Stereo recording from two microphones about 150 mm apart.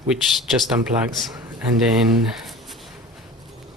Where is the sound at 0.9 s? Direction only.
45° right (ahead or behind).